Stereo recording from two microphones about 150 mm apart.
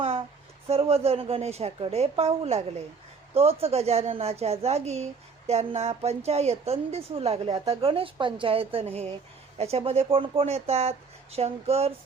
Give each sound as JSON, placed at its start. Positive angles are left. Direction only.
{"t": 0.7, "sound": "a woman's voice", "side_deg": -40}